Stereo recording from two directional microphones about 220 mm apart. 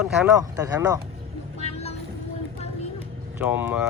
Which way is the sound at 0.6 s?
15° right (ahead or behind).